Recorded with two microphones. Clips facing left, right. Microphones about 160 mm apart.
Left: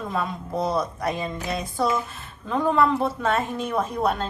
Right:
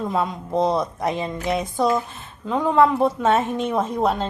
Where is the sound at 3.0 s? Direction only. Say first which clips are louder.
Right 5 dB; 20° right (ahead or behind).